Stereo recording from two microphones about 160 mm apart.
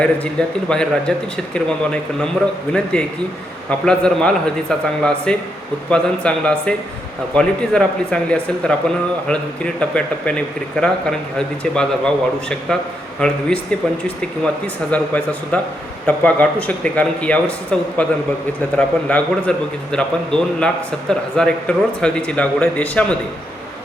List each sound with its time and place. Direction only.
0.0 s a man's voice: 5° left (ahead or behind)
3.7 s a man's voice: 5° left (ahead or behind)